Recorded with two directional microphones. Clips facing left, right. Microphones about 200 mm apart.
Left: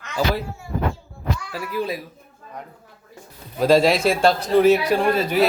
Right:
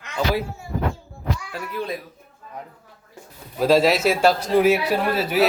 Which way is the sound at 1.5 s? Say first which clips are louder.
Left 5 dB; 5° left (ahead or behind).